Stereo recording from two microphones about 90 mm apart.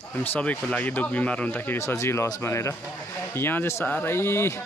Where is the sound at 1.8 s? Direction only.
30° left (ahead or behind).